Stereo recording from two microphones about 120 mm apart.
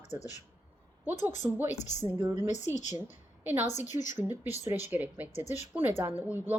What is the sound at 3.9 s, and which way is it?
Speech, 90° left.